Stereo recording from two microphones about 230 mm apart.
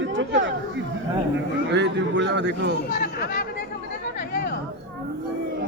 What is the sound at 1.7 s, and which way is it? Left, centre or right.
A man's voice, right.